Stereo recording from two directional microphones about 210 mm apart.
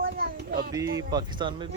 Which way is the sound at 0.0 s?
45° right (ahead or behind).